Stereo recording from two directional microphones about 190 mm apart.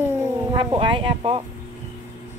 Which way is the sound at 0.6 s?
25° right (ahead or behind).